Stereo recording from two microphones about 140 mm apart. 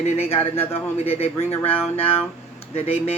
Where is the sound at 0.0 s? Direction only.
45° left (ahead or behind).